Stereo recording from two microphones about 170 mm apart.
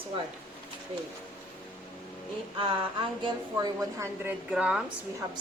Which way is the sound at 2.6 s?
30° right (ahead or behind).